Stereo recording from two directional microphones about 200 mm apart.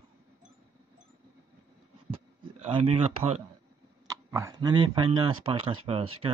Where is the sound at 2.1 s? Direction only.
25° right (ahead or behind).